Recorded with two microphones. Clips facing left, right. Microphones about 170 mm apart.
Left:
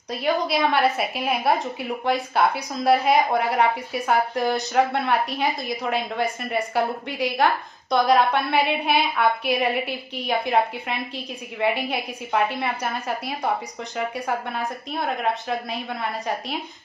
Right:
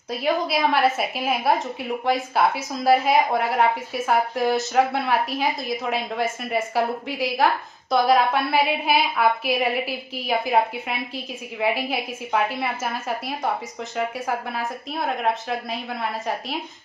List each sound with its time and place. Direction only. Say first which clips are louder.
0.1 s a woman's voice: even; centre (ahead or behind)